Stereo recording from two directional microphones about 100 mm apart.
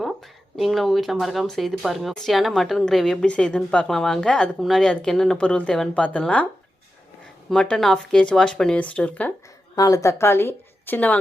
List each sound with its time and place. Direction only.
0.5 s speech: centre (ahead or behind)
7.5 s speech: 10° left (ahead or behind)
9.7 s a woman's voice: 35° left (ahead or behind); by 11.2 s 15° left (ahead or behind)